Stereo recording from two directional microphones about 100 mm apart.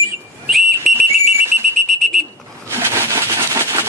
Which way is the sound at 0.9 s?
Centre (ahead or behind).